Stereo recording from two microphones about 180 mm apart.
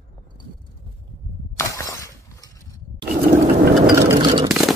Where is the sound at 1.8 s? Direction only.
20° left (ahead or behind).